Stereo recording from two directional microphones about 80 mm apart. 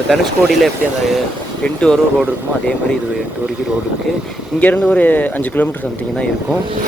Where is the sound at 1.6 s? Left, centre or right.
Centre.